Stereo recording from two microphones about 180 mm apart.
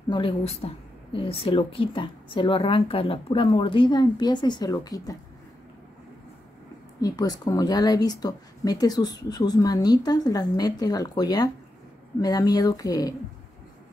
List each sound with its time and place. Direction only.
0.1 s speech: 30° left (ahead or behind)
7.0 s speech: 20° left (ahead or behind)